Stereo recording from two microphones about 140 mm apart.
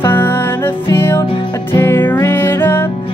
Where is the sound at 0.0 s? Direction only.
15° left (ahead or behind).